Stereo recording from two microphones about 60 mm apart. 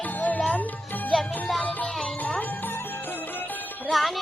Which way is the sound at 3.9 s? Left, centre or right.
Centre.